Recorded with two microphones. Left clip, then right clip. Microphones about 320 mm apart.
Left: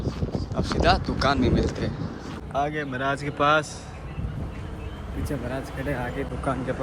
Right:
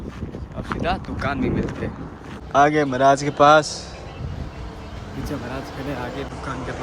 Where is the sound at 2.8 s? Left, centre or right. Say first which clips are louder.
Right 11 dB; centre.